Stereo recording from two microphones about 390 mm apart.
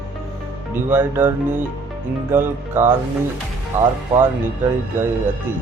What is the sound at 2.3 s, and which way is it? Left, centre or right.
Speech, centre.